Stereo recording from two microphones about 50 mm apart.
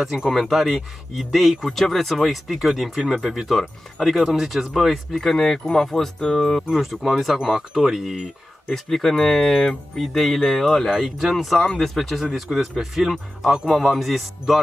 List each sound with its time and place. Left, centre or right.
0.3 s speech: centre
6.1 s speech: centre
6.7 s speech: centre
8.6 s speech: centre
10.9 s speech: centre